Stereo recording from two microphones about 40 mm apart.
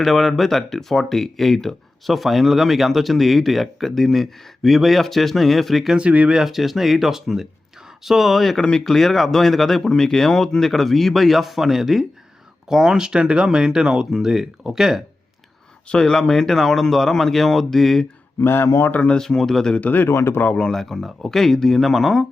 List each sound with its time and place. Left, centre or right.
0.0 s speech: centre
6.0 s speech: right
6.3 s speech: centre
15.9 s speech: centre
18.4 s speech: left
19.2 s speech: centre
20.5 s speech: left
20.7 s speech: centre